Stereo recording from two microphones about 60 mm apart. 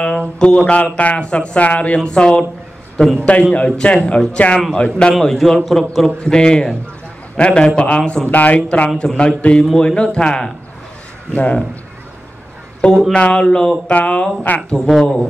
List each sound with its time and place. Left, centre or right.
0.0 s a sound: centre
0.7 s speech: left
3.5 s speech: centre
5.2 s a man's voice: centre
6.2 s speech: centre
13.1 s speech: centre
13.8 s speech: left
14.9 s a man's voice: centre